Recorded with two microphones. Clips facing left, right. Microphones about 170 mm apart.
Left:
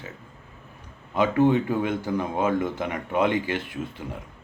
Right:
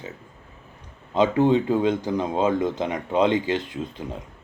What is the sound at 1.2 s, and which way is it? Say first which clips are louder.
Speech: right 1 dB; 20° right (ahead or behind).